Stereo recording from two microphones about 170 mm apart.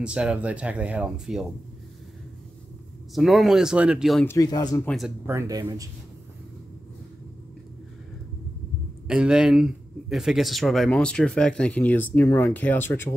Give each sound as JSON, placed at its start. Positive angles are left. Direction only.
{"t": 0.0, "sound": "speech", "side_deg": -5}
{"t": 3.2, "sound": "speech", "side_deg": 0}
{"t": 4.3, "sound": "speech", "side_deg": 20}
{"t": 4.8, "sound": "speech", "side_deg": 0}
{"t": 5.2, "sound": "speech", "side_deg": -15}
{"t": 9.0, "sound": "speech", "side_deg": -5}